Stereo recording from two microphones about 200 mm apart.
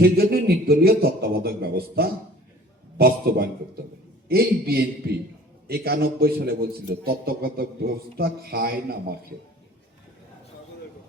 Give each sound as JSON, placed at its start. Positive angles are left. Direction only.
{"t": 0.0, "sound": "a man's voice", "side_deg": -50}